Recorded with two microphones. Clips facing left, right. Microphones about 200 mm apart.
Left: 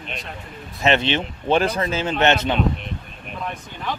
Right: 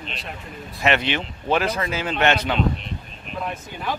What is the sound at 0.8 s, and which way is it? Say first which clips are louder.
Speech: left 2 dB; 25° left (ahead or behind).